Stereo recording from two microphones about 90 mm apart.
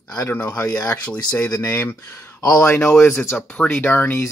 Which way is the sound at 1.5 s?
30° left (ahead or behind).